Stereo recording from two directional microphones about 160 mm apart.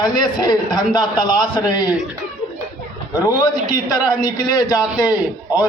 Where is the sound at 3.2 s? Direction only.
20° left (ahead or behind).